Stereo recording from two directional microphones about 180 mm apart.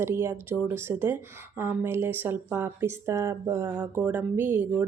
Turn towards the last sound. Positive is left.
turn(degrees=-10)  # may be behind; listen again after turning